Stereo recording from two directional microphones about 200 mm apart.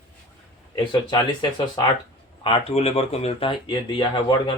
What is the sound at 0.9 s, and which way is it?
Speech, 25° left (ahead or behind).